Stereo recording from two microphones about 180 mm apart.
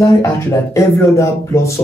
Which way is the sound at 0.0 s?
15° left (ahead or behind).